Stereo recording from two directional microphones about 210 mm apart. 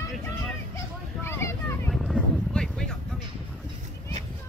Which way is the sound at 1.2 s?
10° left (ahead or behind).